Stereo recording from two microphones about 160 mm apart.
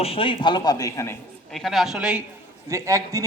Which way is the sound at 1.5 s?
Centre (ahead or behind).